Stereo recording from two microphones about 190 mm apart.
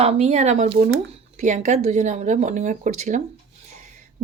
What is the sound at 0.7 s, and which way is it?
Speech, 65° right (ahead or behind).